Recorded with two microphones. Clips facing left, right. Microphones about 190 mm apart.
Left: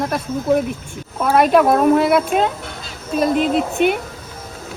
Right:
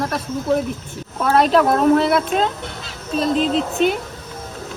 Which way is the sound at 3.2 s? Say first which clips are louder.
Left 2 dB; 55° left (ahead or behind).